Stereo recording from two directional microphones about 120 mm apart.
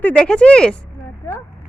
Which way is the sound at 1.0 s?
20° left (ahead or behind).